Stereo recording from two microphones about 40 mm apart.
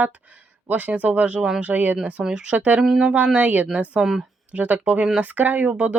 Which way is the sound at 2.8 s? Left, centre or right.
Right.